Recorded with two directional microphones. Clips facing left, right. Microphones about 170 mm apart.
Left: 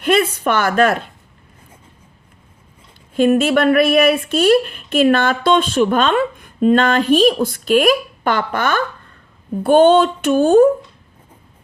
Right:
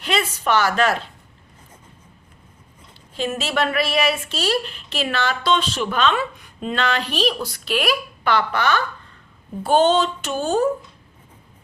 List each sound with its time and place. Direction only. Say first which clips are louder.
0.0 s a woman's voice: left 7 dB; 50° left (ahead or behind)
3.2 s a woman's voice: left 10 dB; 55° left (ahead or behind)